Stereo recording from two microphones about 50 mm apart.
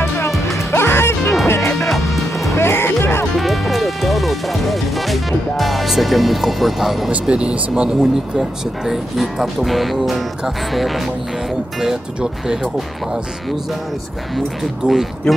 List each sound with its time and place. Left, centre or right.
0.0 s music: left
2.0 s music: left
2.5 s music: left
3.3 s music: centre
7.1 s speech: right
8.0 s speech: centre
14.3 s speech: centre
15.3 s speech: centre